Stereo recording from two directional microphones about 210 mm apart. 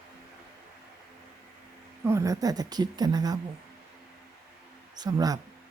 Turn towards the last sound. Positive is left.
turn(degrees=-20)  # may be behind; listen again after turning